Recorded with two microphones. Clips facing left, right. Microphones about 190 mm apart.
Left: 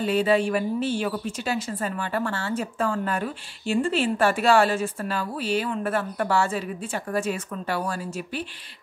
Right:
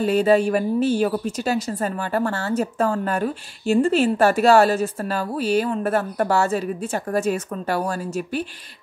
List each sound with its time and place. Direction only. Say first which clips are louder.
0.0 s a woman's voice: right 4 dB; 40° right (ahead or behind)